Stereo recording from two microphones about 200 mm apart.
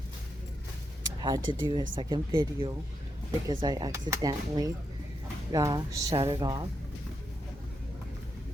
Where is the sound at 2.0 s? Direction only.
20° right (ahead or behind).